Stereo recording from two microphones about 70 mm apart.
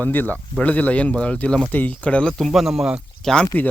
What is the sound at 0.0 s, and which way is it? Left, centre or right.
Speech, left.